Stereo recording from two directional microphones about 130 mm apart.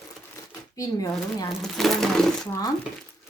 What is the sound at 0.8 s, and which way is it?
Speech, 25° left (ahead or behind).